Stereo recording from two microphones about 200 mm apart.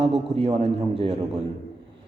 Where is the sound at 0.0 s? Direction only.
30° right (ahead or behind).